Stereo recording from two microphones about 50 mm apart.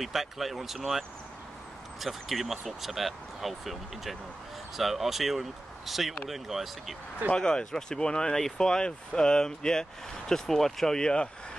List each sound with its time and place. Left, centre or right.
0.0 s speech: centre
7.3 s speech: centre
11.0 s speech: centre